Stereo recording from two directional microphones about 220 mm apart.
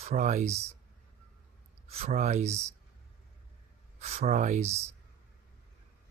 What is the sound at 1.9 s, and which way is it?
Speech, 30° right (ahead or behind).